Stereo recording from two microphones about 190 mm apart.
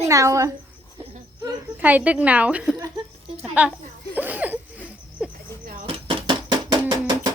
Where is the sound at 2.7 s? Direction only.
20° right (ahead or behind).